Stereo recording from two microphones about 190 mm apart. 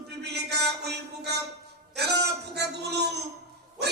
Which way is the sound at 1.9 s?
60° right (ahead or behind).